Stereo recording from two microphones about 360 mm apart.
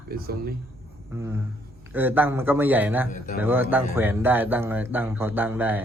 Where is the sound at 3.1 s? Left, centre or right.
Left.